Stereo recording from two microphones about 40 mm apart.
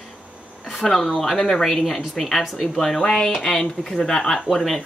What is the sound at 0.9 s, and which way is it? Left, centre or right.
Speech, centre.